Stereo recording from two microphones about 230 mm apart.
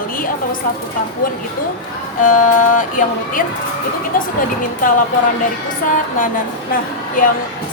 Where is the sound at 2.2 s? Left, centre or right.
Left.